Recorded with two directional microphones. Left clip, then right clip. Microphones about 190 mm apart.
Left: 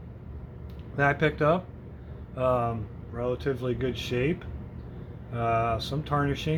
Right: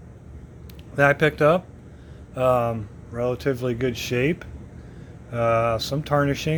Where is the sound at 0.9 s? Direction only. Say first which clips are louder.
Right 6 dB; 45° right (ahead or behind).